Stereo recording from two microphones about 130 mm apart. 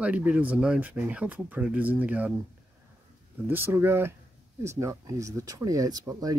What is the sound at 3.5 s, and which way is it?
Speech, 15° right (ahead or behind).